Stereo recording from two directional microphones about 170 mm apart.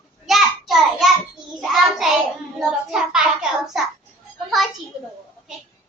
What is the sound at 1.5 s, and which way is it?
Child singing, centre (ahead or behind).